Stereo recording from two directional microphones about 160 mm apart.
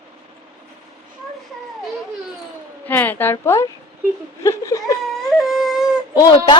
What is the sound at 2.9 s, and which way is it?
A woman's voice, 10° left (ahead or behind).